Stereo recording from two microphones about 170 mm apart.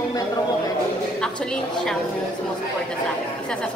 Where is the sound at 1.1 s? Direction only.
5° left (ahead or behind).